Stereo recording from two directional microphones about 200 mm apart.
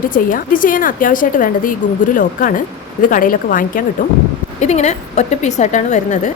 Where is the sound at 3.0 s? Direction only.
45° left (ahead or behind).